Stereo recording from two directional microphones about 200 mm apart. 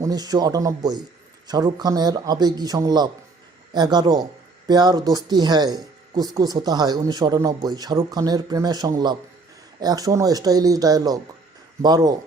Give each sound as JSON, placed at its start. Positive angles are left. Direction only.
{"t": 0.0, "sound": "speech", "side_deg": -20}